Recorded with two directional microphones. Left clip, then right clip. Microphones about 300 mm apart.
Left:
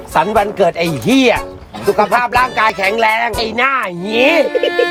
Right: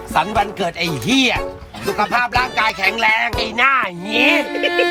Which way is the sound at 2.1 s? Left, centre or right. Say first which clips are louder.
Left 3 dB; centre.